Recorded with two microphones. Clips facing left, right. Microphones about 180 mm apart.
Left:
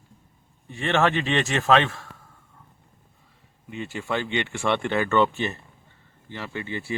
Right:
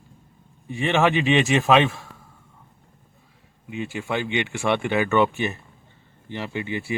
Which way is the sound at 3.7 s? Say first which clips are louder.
Right 1 dB; 10° right (ahead or behind).